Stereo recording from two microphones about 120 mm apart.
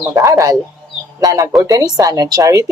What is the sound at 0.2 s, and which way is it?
A woman's voice, 30° right (ahead or behind).